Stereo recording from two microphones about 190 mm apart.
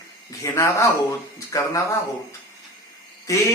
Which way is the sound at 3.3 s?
15° left (ahead or behind).